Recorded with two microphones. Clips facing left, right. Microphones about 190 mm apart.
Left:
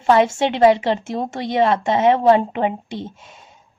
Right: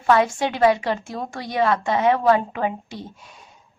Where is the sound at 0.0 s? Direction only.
25° left (ahead or behind).